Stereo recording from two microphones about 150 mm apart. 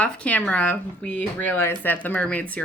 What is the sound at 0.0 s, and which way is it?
Speech, 10° left (ahead or behind).